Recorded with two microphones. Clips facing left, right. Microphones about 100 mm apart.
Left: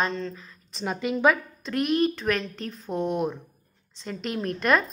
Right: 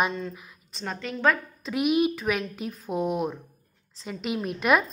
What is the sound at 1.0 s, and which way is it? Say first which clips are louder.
Speech: left 3 dB; 15° left (ahead or behind).